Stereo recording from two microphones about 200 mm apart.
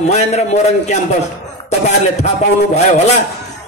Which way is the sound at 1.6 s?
35° left (ahead or behind).